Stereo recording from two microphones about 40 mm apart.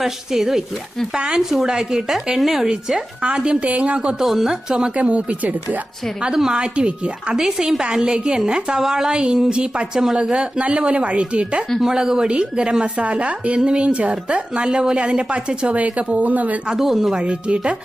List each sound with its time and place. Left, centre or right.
0.0 s a woman's voice: centre
1.4 s speech: centre
3.2 s a woman's voice: right
4.2 s speech: centre
4.9 s speech: right
6.2 s speech: centre
6.5 s a woman's voice: right
11.8 s a woman's voice: centre
16.1 s speech: right
16.6 s speech: centre
17.2 s a woman's voice: right